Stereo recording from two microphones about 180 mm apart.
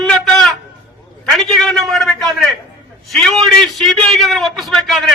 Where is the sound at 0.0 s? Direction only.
5° left (ahead or behind).